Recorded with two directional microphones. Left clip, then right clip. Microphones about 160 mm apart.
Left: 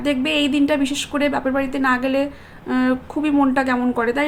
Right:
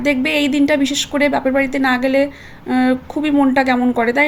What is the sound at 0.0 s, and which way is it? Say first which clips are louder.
A woman's voice: right 3 dB; 25° right (ahead or behind).